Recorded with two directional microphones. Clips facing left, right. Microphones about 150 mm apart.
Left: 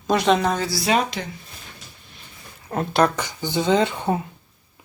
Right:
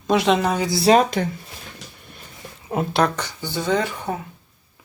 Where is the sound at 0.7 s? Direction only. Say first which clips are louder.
Right 11 dB; 35° right (ahead or behind).